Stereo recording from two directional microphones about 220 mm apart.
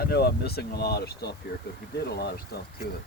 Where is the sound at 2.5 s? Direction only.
45° left (ahead or behind).